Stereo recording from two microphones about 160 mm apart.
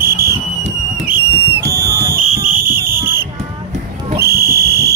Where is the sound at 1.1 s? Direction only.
15° right (ahead or behind).